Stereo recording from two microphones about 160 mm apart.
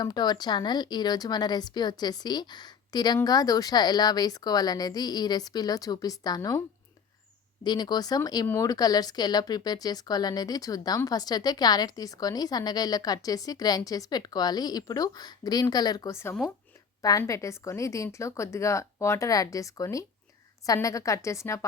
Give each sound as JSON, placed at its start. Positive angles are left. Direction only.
{"t": 0.0, "sound": "speech", "side_deg": 25}
{"t": 7.6, "sound": "speech", "side_deg": 25}